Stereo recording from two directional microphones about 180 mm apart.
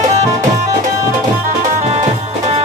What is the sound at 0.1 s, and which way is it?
Music, 35° right (ahead or behind).